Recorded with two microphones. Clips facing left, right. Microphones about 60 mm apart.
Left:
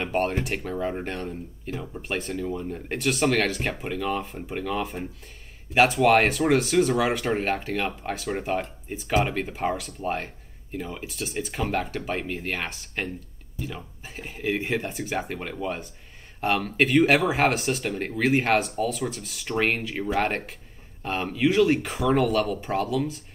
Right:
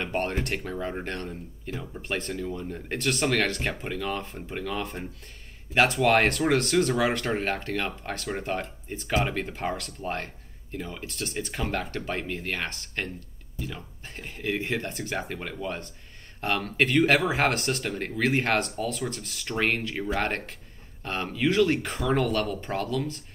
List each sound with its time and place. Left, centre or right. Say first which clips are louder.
0.0 s speech: left 3 dB; centre